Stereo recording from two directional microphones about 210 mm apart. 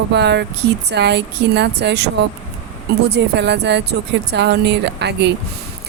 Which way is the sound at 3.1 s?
55° right (ahead or behind).